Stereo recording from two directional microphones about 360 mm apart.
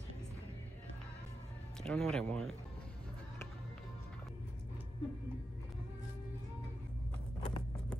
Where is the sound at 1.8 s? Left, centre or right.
Centre.